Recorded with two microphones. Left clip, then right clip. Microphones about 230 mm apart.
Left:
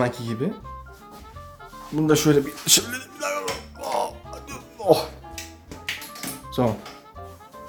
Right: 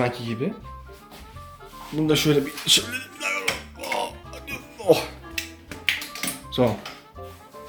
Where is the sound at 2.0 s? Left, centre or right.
Centre.